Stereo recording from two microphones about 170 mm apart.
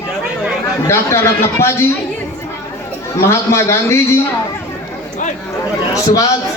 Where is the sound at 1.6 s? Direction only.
15° left (ahead or behind).